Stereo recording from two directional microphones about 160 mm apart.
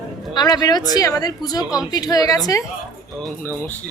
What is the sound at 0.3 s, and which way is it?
A woman's voice, 25° left (ahead or behind).